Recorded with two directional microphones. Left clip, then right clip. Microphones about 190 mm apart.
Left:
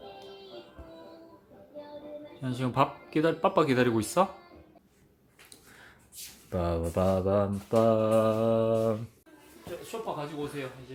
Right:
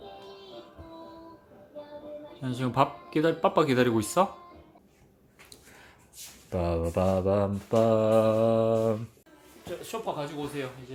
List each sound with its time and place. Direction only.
2.4 s mantra: 5° right (ahead or behind)
6.5 s mantra: centre (ahead or behind)
9.9 s speech: 55° right (ahead or behind)